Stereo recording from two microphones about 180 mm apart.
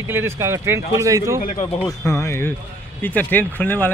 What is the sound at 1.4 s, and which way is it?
Speech, 45° left (ahead or behind).